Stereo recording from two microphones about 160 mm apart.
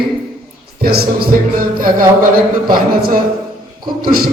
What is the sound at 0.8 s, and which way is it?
A man's voice, 70° right (ahead or behind).